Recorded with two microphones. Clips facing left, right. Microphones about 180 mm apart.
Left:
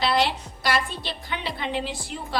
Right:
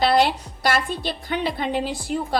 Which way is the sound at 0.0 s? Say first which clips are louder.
Right 5 dB; 45° right (ahead or behind).